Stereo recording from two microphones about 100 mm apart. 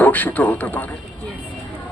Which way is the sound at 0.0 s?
15° left (ahead or behind).